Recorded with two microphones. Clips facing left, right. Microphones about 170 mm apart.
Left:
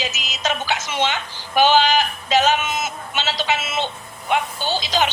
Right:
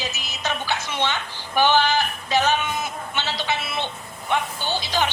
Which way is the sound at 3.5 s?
90° left.